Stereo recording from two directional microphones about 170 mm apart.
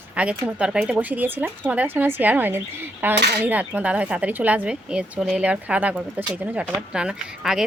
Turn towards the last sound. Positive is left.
turn(degrees=-5)  # may be behind; listen again after turning